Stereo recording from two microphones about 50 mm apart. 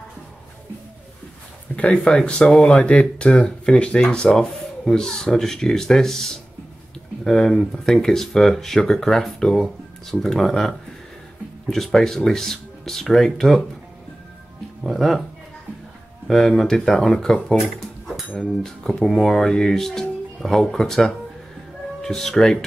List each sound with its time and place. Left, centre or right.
1.7 s a sound: left
2.1 s speech: centre
7.2 s speech: centre
11.7 s speech: centre
14.8 s speech: centre
16.3 s speech: centre
17.7 s dishes: centre
18.6 s speech: centre
19.0 s speech: centre